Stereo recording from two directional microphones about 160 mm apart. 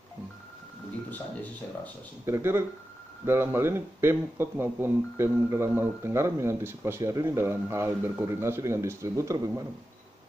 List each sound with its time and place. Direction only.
2.2 s speech: 15° right (ahead or behind)